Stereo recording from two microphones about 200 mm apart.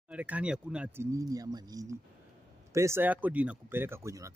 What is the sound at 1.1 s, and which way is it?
Speech, 20° right (ahead or behind).